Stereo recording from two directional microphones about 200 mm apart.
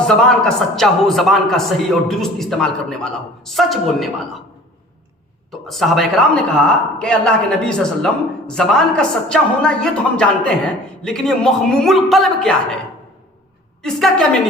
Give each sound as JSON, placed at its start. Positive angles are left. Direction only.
{"t": 0.1, "sound": "a man's voice", "side_deg": 5}
{"t": 5.5, "sound": "a man's voice", "side_deg": 0}
{"t": 13.8, "sound": "a man's voice", "side_deg": 5}